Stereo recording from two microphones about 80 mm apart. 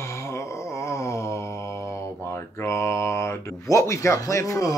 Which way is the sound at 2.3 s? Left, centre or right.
Left.